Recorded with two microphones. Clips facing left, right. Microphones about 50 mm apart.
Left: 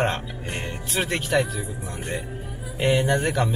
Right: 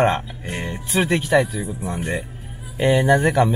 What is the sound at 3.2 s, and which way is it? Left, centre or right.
Speech, centre.